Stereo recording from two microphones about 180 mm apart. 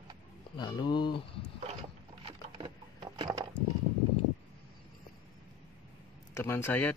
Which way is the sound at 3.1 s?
20° right (ahead or behind).